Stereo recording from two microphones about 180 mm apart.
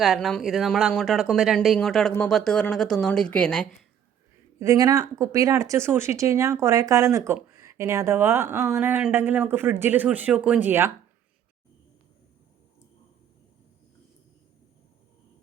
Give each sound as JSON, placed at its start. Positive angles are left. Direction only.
{"t": 0.0, "sound": "speech", "side_deg": 0}
{"t": 4.6, "sound": "speech", "side_deg": -20}